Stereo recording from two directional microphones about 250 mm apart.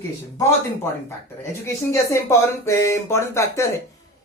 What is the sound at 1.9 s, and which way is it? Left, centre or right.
A man's voice, centre.